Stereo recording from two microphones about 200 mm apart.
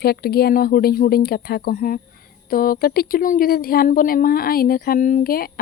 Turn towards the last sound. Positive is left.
turn(degrees=50)  # may be behind; listen again after turning